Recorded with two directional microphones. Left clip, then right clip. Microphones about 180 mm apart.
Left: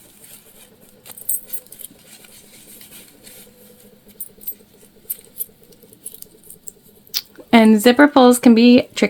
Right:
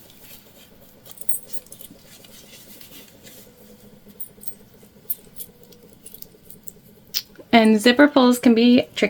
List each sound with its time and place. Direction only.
7.1 s speech: 45° left (ahead or behind)